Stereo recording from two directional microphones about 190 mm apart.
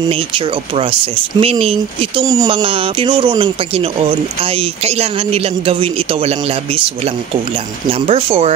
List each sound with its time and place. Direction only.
0.1 s speech: 30° right (ahead or behind)
2.2 s speech: 20° right (ahead or behind)
8.1 s speech: 30° right (ahead or behind)